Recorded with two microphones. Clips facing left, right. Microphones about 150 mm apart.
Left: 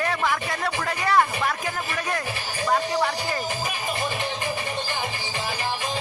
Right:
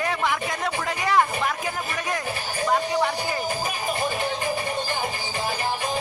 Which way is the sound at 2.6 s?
10° right (ahead or behind).